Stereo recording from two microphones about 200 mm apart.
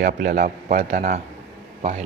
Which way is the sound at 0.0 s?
45° right (ahead or behind).